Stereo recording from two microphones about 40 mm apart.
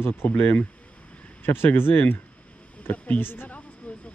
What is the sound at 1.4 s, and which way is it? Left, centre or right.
Speech, left.